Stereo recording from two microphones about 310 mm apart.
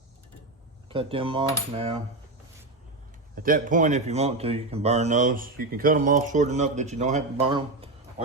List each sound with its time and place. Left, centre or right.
0.9 s cutlery: centre
3.3 s speech: right